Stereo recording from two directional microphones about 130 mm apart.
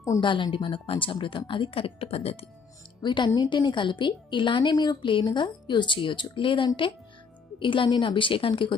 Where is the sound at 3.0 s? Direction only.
35° left (ahead or behind).